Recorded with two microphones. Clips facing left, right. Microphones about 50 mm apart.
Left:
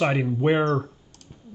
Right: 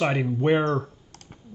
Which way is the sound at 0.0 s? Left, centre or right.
Centre.